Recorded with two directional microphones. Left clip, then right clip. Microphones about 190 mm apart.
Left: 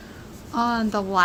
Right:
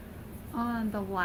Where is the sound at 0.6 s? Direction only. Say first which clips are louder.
Left 11 dB; 50° left (ahead or behind).